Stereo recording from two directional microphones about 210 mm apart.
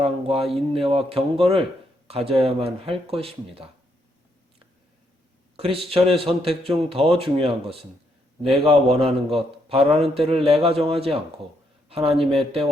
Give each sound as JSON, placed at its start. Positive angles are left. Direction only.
{"t": 0.0, "sound": "speech", "side_deg": -30}
{"t": 5.5, "sound": "speech", "side_deg": -25}